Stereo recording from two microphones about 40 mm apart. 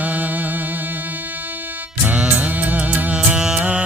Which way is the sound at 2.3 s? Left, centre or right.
Right.